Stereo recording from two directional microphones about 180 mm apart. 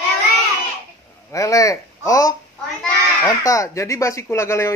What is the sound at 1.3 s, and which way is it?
Speech, 20° left (ahead or behind).